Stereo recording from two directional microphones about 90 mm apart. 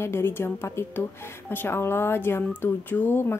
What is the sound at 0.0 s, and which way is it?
Speech, 25° left (ahead or behind).